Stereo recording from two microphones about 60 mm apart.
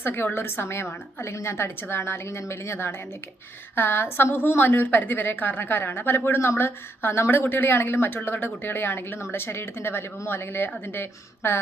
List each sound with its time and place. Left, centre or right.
0.0 s a woman's voice: left